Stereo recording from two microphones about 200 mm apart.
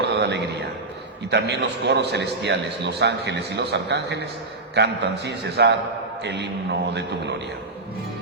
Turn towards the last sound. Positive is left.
turn(degrees=-60)  # may be behind; listen again after turning